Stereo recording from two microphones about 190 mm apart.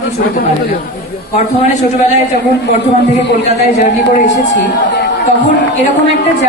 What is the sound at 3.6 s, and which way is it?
Speech, 35° left (ahead or behind).